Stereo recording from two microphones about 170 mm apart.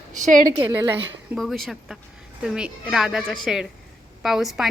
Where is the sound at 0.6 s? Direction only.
15° right (ahead or behind).